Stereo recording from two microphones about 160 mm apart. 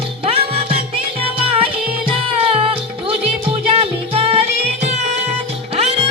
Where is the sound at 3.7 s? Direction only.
35° right (ahead or behind).